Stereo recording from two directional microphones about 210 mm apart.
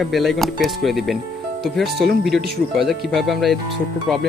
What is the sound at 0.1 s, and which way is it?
Speech, centre (ahead or behind).